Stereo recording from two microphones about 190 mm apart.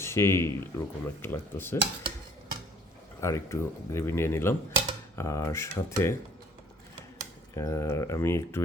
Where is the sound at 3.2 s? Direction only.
15° left (ahead or behind).